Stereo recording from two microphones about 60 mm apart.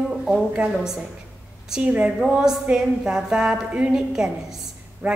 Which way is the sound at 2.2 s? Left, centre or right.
Centre.